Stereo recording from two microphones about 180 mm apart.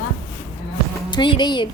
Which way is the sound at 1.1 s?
25° left (ahead or behind).